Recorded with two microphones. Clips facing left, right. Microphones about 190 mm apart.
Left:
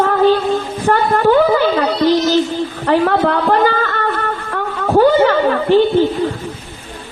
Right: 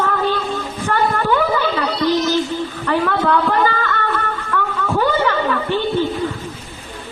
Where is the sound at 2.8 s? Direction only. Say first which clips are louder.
Left 5 dB; 40° left (ahead or behind).